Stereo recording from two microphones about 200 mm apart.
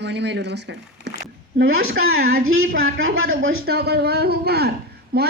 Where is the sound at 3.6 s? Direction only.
50° right (ahead or behind).